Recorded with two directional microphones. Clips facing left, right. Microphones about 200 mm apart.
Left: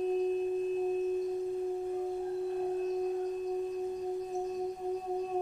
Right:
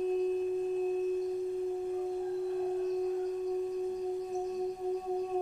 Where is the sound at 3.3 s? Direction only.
20° left (ahead or behind).